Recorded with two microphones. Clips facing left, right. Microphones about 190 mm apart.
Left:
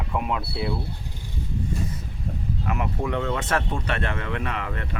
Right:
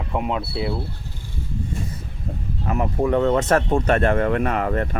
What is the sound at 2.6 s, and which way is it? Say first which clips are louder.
Speech: right 7 dB; 35° right (ahead or behind).